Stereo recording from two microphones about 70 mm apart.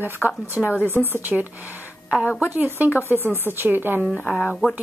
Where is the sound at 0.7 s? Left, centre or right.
Left.